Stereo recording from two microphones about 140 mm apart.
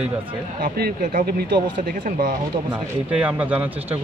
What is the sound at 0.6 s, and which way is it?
Speech, 80° right.